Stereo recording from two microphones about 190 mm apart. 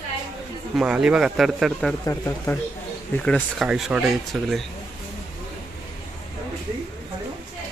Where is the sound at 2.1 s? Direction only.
15° left (ahead or behind).